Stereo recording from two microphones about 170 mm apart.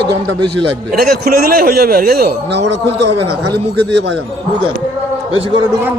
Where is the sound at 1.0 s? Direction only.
60° right (ahead or behind); by 2.8 s 85° right.